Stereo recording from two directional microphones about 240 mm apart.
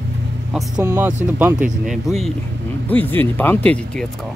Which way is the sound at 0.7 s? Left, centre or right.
Centre.